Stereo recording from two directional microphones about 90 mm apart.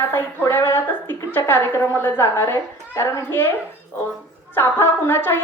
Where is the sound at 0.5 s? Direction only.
25° left (ahead or behind).